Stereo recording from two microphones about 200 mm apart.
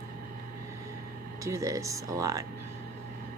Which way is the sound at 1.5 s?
15° right (ahead or behind).